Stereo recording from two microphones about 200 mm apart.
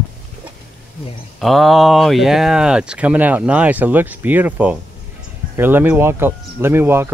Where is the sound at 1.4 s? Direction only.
Centre (ahead or behind).